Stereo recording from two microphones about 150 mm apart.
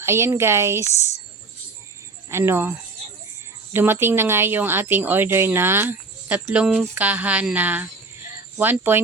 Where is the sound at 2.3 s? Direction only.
15° right (ahead or behind).